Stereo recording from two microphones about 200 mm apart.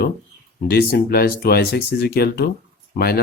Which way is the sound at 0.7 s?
50° left (ahead or behind).